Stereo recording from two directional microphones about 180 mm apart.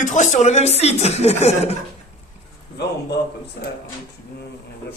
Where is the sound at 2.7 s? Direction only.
70° left (ahead or behind).